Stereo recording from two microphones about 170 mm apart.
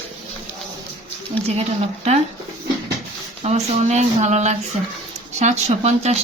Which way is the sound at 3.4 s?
40° right (ahead or behind).